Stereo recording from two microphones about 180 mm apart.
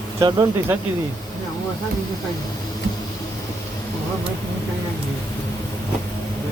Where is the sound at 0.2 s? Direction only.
20° right (ahead or behind).